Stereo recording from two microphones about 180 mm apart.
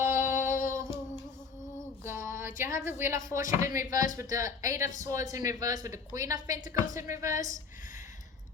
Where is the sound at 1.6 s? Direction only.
15° left (ahead or behind).